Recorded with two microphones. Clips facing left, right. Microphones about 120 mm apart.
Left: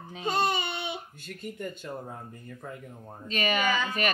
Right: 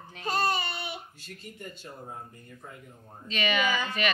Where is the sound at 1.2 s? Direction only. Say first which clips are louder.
Left 6 dB; 55° left (ahead or behind).